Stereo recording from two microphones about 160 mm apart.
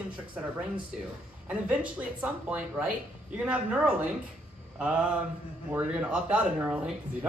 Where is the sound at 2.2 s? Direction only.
5° right (ahead or behind).